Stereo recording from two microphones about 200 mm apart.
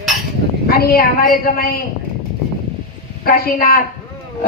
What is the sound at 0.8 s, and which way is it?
A woman's voice, 50° left (ahead or behind).